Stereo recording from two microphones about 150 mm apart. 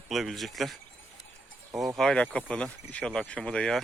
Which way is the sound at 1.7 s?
20° right (ahead or behind).